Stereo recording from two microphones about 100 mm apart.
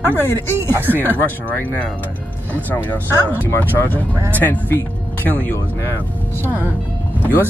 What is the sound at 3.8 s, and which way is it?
Speech, 20° left (ahead or behind).